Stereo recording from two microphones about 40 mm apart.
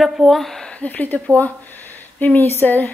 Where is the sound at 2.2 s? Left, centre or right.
Left.